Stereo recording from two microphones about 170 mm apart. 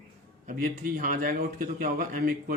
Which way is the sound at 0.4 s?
55° right (ahead or behind).